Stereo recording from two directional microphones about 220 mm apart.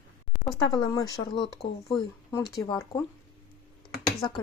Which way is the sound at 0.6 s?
20° left (ahead or behind).